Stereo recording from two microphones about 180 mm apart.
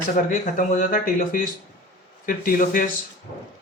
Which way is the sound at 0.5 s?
45° left (ahead or behind).